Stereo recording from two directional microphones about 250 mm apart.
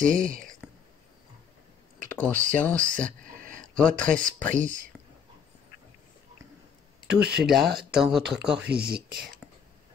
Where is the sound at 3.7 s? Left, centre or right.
Centre.